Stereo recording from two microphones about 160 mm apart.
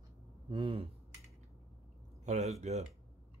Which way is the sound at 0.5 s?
35° right (ahead or behind).